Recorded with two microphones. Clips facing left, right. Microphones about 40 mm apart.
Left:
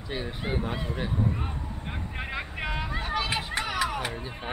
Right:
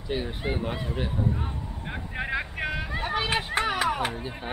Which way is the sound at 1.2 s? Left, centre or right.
Centre.